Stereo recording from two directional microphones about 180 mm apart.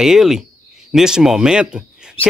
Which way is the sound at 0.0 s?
Centre (ahead or behind).